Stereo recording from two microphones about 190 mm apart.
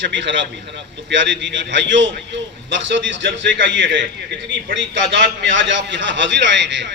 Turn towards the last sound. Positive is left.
turn(degrees=-70)  # may be behind; listen again after turning